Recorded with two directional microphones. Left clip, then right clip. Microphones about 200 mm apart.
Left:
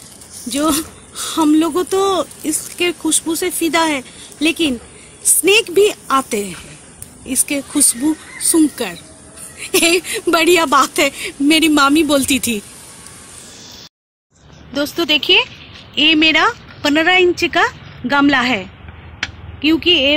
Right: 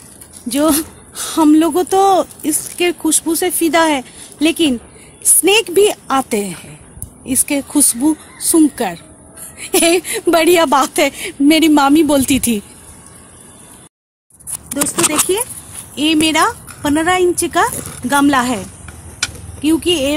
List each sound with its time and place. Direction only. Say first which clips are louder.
0.5 s speech: right 3 dB; 55° right (ahead or behind)
15.9 s speech: left 3 dB; 20° right (ahead or behind)
19.6 s speech: left 2 dB; 35° right (ahead or behind)